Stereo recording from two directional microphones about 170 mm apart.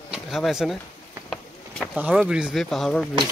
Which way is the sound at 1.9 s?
10° right (ahead or behind).